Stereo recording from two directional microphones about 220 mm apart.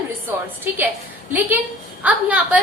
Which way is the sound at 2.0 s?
5° right (ahead or behind).